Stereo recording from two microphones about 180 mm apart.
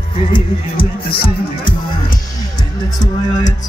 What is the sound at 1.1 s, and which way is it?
Music, 30° left (ahead or behind).